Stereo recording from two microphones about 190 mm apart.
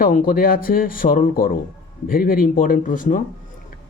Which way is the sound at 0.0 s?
50° left (ahead or behind).